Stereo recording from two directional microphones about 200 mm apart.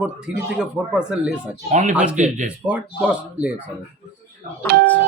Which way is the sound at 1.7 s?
35° right (ahead or behind).